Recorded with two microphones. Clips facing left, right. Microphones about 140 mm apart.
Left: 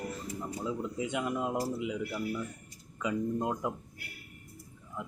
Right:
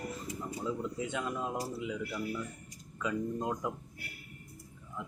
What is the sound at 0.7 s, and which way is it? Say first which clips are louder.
Speech: left 1 dB; 15° left (ahead or behind).